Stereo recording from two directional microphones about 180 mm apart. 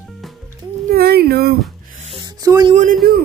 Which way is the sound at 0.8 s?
60° right (ahead or behind).